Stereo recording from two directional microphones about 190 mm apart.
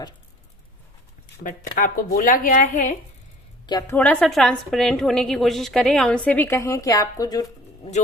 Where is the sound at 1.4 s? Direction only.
45° left (ahead or behind).